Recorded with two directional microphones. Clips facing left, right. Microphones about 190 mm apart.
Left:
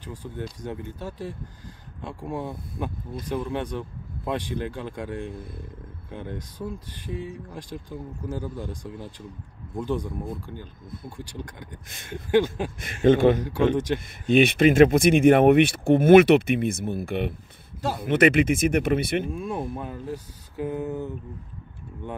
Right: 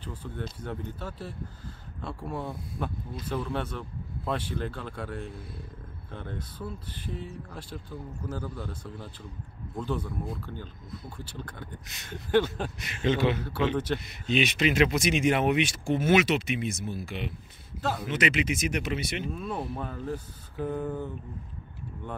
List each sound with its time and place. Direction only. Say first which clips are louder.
0.0 s speech: left 3 dB; 15° left (ahead or behind)
6.1 s speech: left 4 dB; 15° left (ahead or behind)
12.8 s a man's voice: left 9 dB; 50° left (ahead or behind)
19.3 s speech: left 3 dB; 10° left (ahead or behind)